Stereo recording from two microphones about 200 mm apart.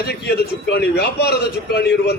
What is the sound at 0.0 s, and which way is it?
A man's voice, 55° left (ahead or behind).